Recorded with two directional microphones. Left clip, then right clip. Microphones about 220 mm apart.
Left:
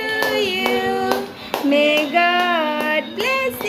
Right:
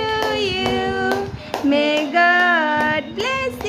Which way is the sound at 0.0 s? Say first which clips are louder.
Left 1 dB; 15° right (ahead or behind).